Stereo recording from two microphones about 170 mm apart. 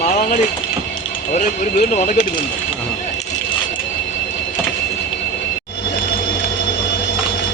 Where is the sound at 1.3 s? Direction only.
50° left (ahead or behind).